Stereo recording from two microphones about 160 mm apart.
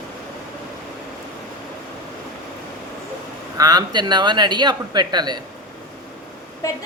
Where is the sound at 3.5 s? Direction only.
25° right (ahead or behind).